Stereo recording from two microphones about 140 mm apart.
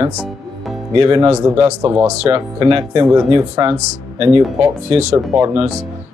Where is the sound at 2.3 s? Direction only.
40° right (ahead or behind).